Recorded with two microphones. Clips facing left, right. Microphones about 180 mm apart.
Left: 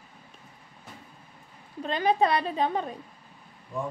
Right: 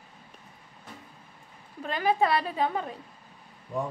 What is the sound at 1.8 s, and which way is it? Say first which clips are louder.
A woman's voice: left 1 dB; 20° left (ahead or behind).